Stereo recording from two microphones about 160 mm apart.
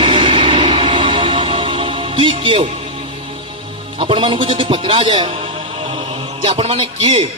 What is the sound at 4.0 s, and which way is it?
A man's voice, 30° right (ahead or behind).